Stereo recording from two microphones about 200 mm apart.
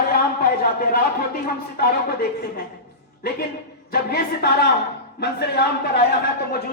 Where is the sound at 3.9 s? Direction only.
50° left (ahead or behind).